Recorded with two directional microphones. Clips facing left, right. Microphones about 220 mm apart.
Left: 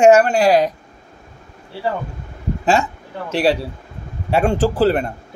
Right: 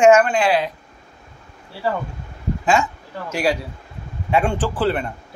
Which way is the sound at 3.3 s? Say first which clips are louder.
Left 4 dB; 30° left (ahead or behind).